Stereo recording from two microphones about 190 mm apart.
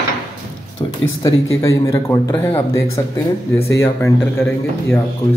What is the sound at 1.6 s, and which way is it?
Speech, 15° left (ahead or behind).